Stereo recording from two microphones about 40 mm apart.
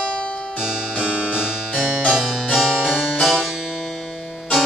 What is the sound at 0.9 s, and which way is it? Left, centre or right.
Music, centre.